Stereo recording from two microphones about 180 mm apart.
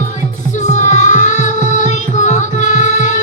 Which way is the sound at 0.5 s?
40° left (ahead or behind).